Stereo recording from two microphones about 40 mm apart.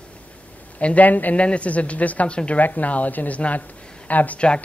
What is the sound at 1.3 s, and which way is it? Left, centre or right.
A man's voice, left.